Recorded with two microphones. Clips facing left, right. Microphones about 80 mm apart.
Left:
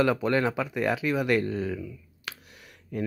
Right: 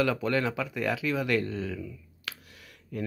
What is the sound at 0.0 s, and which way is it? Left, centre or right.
Speech, left.